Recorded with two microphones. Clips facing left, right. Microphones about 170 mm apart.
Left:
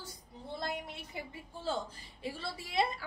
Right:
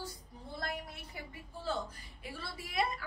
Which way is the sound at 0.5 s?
25° left (ahead or behind).